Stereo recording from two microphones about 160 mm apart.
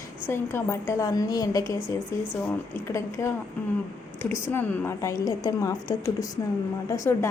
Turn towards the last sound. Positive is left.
turn(degrees=20)  # may be behind; listen again after turning